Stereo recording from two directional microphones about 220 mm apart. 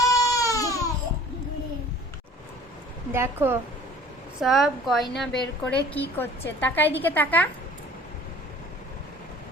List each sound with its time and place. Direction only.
0.1 s baby cry: 15° left (ahead or behind)
3.1 s a woman's voice: 10° right (ahead or behind); by 7.4 s 10° left (ahead or behind)